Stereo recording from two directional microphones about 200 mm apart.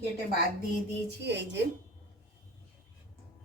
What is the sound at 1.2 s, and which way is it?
Speech, 60° right (ahead or behind).